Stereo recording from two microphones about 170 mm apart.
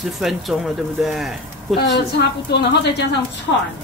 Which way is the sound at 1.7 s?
90° left.